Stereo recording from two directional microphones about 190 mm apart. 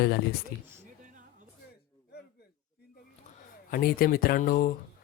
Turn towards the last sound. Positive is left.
turn(degrees=50)  # may be behind; listen again after turning